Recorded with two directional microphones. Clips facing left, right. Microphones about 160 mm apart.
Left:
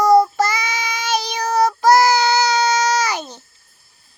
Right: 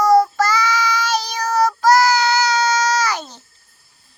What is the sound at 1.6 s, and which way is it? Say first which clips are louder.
Child singing: left 1 dB; 15° left (ahead or behind).